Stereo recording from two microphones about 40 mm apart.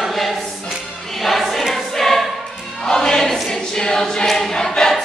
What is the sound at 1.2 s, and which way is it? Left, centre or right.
Choir, centre.